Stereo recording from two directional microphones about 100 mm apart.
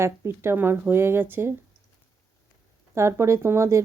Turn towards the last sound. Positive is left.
turn(degrees=-30)  # may be behind; listen again after turning